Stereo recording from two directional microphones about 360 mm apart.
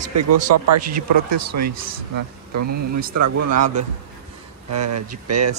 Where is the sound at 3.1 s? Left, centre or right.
Right.